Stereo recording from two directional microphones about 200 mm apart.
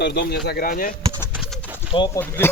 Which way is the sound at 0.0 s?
55° left (ahead or behind).